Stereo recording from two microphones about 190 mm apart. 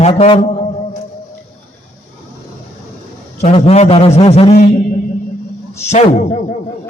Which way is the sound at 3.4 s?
35° left (ahead or behind).